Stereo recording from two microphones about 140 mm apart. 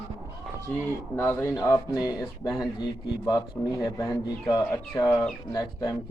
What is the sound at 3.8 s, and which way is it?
Speech, 20° left (ahead or behind).